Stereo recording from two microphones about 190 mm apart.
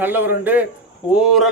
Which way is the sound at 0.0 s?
10° right (ahead or behind).